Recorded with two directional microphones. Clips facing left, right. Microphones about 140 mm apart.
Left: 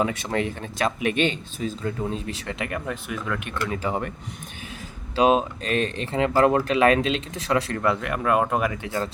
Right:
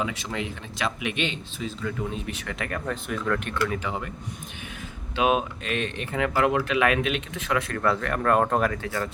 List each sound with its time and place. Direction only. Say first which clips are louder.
0.0 s speech: left 5 dB; 50° left (ahead or behind)
1.8 s speech: even; 30° left (ahead or behind)
2.8 s speech: right 2 dB; 5° left (ahead or behind)
3.8 s speech: left 5 dB; 50° left (ahead or behind)
5.1 s speech: left 4 dB; 30° left (ahead or behind)
7.8 s speech: left 1 dB; 15° left (ahead or behind)